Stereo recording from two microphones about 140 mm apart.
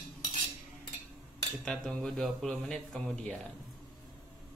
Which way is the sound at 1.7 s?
5° left (ahead or behind).